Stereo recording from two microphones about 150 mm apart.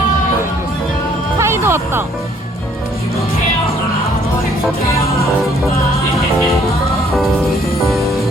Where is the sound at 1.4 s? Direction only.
15° right (ahead or behind).